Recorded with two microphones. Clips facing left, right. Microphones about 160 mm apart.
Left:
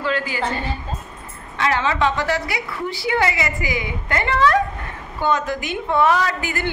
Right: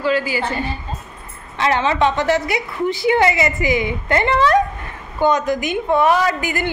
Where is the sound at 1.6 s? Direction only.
20° right (ahead or behind).